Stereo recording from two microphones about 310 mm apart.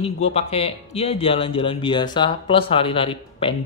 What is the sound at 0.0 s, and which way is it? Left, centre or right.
Speech, centre.